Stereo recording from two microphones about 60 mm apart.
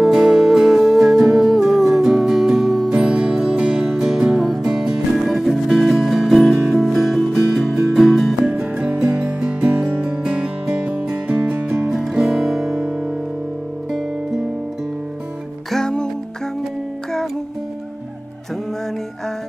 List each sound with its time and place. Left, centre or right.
0.0 s music: centre
2.9 s music: centre
8.5 s music: centre
11.9 s music: centre
15.7 s music: centre